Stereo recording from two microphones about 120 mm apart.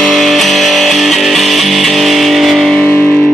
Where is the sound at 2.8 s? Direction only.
15° left (ahead or behind).